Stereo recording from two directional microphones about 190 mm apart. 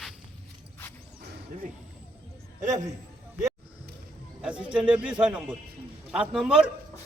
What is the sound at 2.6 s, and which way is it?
Speech, 40° right (ahead or behind).